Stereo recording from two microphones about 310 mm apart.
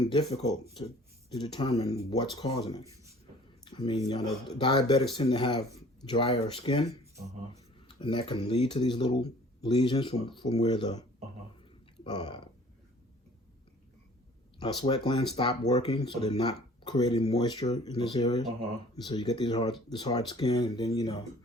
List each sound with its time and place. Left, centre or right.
0.0 s speech: centre
2.8 s speech: centre
3.7 s speech: centre
7.9 s speech: centre
12.0 s speech: centre
14.6 s speech: centre